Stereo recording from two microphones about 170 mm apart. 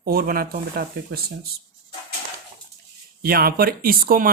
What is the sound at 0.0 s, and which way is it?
Speech, 60° right (ahead or behind).